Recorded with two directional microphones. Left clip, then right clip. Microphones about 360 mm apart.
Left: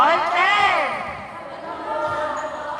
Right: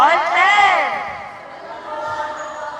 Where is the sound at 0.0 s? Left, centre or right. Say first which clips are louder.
Right 4 dB; right.